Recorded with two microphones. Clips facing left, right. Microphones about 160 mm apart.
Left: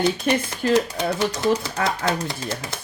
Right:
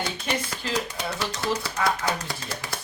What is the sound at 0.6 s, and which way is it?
Speech, 50° left (ahead or behind).